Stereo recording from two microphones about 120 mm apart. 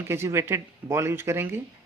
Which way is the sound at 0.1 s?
20° right (ahead or behind).